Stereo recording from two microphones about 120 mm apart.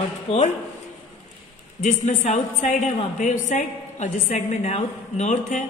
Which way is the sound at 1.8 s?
85° left.